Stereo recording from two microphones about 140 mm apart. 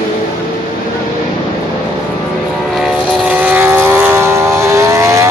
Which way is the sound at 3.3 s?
15° right (ahead or behind).